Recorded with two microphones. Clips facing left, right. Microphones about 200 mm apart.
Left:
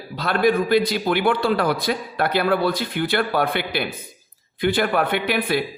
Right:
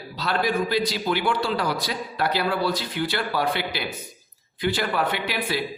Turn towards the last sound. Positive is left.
turn(degrees=55)  # may be behind; listen again after turning